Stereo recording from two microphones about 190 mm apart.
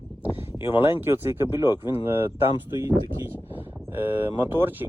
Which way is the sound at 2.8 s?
10° right (ahead or behind).